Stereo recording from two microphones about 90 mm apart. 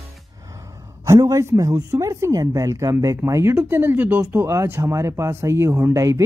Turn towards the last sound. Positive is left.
turn(degrees=-35)  # may be behind; listen again after turning